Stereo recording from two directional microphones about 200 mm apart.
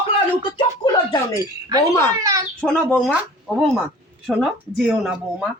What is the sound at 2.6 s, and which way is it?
Speech, 5° left (ahead or behind).